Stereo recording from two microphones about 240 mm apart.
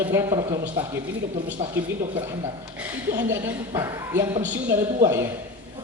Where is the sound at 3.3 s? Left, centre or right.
Centre.